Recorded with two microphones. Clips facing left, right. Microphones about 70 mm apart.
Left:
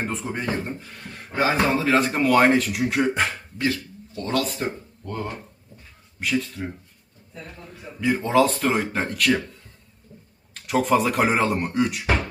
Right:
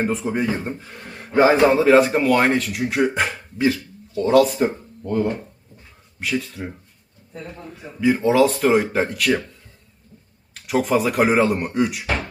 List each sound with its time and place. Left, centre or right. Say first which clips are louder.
0.0 s speech: right 6 dB; centre
0.8 s speech: right 2 dB; right
1.7 s speech: right 7 dB; centre
7.8 s speech: right 4 dB; centre